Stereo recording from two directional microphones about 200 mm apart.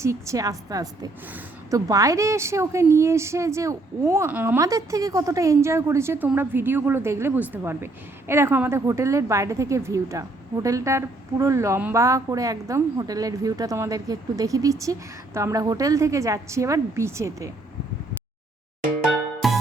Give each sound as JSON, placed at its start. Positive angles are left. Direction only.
{"t": 0.0, "sound": "speech", "side_deg": -15}
{"t": 19.4, "sound": "music", "side_deg": 0}